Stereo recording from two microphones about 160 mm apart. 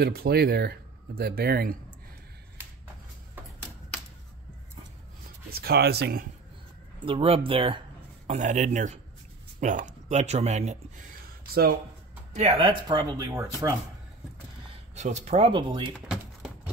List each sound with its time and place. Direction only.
0.0 s speech: 75° right (ahead or behind)
5.5 s speech: 80° right
7.1 s speech: 35° right (ahead or behind)
8.3 s speech: 50° right (ahead or behind)
12.4 s speech: 40° right (ahead or behind); by 13.7 s 20° right (ahead or behind)
15.0 s speech: 45° right (ahead or behind)
16.1 s typing: 5° right (ahead or behind)